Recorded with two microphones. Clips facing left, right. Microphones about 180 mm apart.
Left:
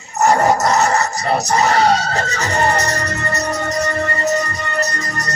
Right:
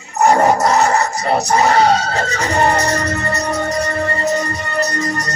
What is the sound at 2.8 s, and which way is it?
Music, 30° right (ahead or behind).